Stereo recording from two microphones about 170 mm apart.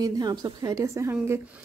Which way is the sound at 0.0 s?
20° right (ahead or behind).